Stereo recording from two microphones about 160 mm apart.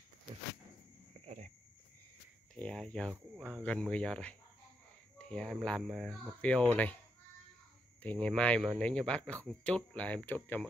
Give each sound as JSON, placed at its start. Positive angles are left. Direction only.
{"t": 1.1, "sound": "a sound", "side_deg": -45}
{"t": 2.5, "sound": "speech", "side_deg": 5}
{"t": 8.0, "sound": "speech", "side_deg": 10}